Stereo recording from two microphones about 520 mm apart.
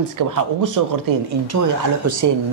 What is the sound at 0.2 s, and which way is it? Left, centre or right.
Speech, right.